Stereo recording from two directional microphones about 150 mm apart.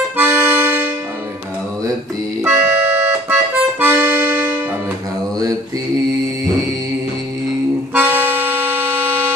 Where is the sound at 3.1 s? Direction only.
10° right (ahead or behind).